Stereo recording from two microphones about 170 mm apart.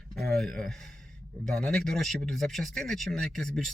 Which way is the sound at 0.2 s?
Centre (ahead or behind).